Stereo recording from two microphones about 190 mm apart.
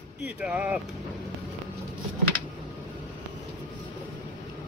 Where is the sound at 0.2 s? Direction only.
5° right (ahead or behind).